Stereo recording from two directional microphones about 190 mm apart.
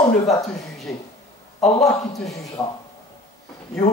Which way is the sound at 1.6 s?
Centre (ahead or behind).